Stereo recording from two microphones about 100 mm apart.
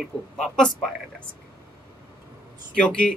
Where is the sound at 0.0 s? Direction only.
5° left (ahead or behind).